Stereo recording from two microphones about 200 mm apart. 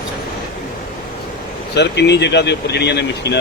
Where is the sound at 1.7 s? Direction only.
60° left (ahead or behind).